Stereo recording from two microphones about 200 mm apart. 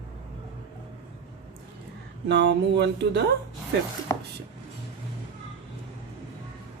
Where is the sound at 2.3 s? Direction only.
60° right (ahead or behind).